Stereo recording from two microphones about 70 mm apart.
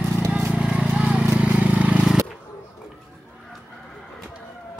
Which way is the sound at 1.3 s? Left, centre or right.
Centre.